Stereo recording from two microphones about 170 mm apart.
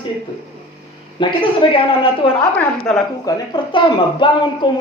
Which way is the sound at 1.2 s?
30° left (ahead or behind).